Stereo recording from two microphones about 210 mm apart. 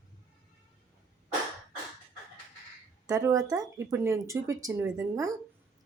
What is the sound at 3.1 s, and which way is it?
Speech, 15° right (ahead or behind).